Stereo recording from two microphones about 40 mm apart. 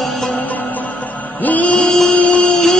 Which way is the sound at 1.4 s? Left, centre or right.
Left.